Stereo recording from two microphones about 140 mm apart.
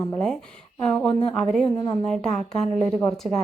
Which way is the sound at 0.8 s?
5° left (ahead or behind).